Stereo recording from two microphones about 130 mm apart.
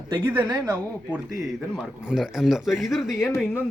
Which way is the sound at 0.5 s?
10° right (ahead or behind).